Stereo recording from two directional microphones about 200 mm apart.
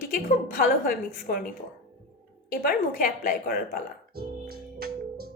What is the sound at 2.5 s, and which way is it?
A woman's voice, 45° left (ahead or behind).